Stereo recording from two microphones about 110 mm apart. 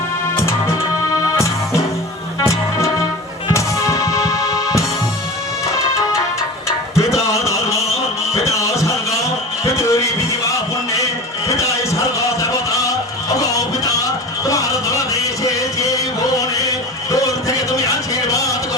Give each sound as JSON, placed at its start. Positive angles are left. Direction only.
{"t": 0.3, "sound": "music", "side_deg": 25}
{"t": 2.4, "sound": "music", "side_deg": 25}
{"t": 6.7, "sound": "music", "side_deg": 25}
{"t": 7.2, "sound": "a sound", "side_deg": 30}
{"t": 8.4, "sound": "music", "side_deg": 30}